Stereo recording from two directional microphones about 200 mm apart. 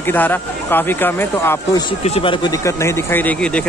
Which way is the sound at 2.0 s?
30° left (ahead or behind).